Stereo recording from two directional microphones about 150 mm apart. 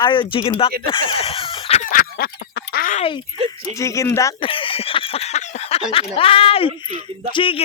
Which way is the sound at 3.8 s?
20° left (ahead or behind).